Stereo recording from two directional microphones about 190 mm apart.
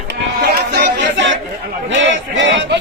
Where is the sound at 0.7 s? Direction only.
65° right (ahead or behind).